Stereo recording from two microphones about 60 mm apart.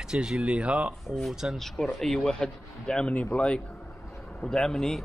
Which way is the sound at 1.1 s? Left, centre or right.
Centre.